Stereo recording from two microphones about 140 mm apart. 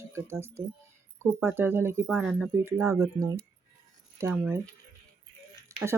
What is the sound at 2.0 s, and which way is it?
Speech, 5° right (ahead or behind).